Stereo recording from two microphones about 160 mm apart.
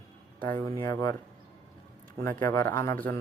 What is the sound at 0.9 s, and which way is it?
Speech, 25° left (ahead or behind).